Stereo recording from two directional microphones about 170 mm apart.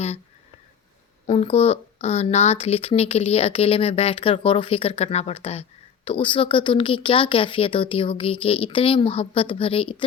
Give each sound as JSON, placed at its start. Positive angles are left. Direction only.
{"t": 1.3, "sound": "speech", "side_deg": 35}